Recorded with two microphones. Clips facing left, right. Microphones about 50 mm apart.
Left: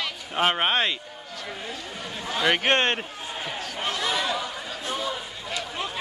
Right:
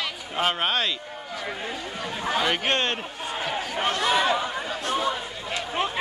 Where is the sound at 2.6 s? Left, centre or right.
Left.